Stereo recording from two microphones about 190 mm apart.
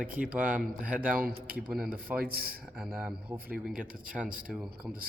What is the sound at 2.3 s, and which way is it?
Speech, 50° right (ahead or behind).